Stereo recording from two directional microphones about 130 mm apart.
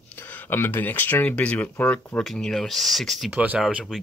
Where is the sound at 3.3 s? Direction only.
10° right (ahead or behind).